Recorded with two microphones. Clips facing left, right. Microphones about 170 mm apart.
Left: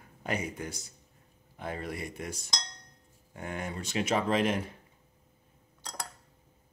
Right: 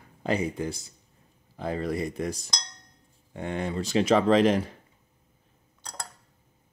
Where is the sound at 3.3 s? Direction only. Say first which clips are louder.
Right 7 dB; 30° right (ahead or behind).